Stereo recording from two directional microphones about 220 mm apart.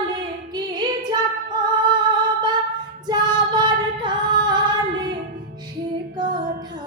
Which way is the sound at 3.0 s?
20° right (ahead or behind).